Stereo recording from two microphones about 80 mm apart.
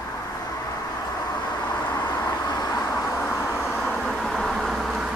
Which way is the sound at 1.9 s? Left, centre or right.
Left.